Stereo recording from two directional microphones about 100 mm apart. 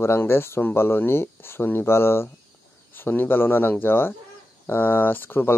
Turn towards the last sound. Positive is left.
turn(degrees=20)  # may be behind; listen again after turning